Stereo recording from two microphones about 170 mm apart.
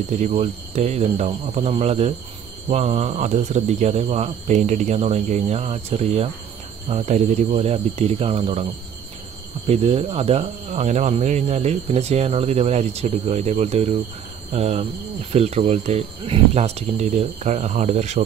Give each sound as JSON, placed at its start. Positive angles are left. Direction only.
{"t": 0.1, "sound": "speech", "side_deg": -40}
{"t": 9.7, "sound": "speech", "side_deg": -35}